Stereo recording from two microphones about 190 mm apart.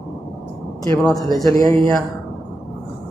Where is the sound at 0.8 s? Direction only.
15° left (ahead or behind).